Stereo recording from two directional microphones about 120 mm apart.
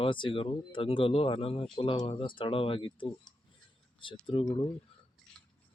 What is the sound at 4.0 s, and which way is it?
Speech, 45° left (ahead or behind).